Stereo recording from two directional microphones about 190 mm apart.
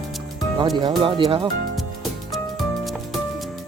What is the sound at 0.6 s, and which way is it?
Speech, 25° right (ahead or behind).